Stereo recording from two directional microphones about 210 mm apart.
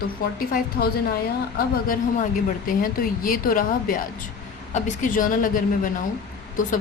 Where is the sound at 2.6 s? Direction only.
40° left (ahead or behind).